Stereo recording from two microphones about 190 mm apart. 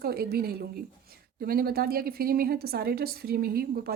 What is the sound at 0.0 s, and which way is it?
Speech, 55° right (ahead or behind).